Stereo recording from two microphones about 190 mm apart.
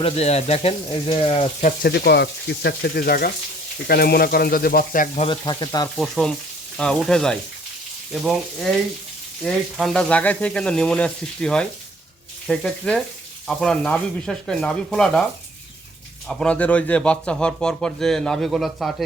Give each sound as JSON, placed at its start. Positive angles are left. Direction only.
{"t": 0.0, "sound": "speech", "side_deg": 35}
{"t": 1.8, "sound": "speech", "side_deg": 60}
{"t": 5.2, "sound": "speech", "side_deg": 25}
{"t": 6.0, "sound": "speech", "side_deg": 0}
{"t": 16.3, "sound": "speech", "side_deg": 5}